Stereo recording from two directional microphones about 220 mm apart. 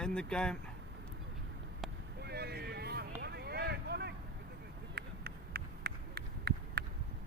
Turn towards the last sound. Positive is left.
turn(degrees=-45)  # may be behind; listen again after turning